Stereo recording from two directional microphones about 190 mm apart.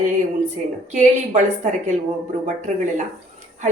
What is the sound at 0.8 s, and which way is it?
A woman's voice, 40° right (ahead or behind).